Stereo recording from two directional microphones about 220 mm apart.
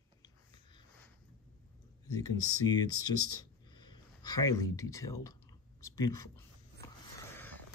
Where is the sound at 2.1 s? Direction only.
15° left (ahead or behind).